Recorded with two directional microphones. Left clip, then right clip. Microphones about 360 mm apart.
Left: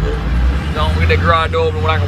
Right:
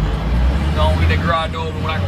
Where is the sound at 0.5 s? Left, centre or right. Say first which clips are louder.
Even; right.